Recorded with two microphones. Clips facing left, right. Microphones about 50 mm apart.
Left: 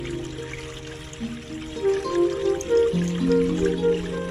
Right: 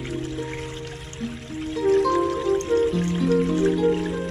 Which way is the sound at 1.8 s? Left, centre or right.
Centre.